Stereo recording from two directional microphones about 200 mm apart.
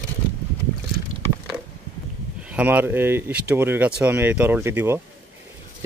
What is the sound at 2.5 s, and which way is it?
Speech, 5° right (ahead or behind).